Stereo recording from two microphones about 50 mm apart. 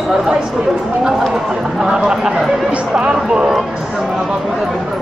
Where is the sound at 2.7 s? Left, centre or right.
Right.